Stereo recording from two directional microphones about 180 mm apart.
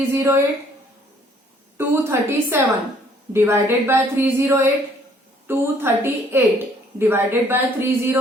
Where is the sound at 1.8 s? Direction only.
15° right (ahead or behind).